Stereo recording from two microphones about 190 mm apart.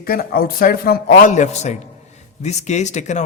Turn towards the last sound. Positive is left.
turn(degrees=40)  # may be behind; listen again after turning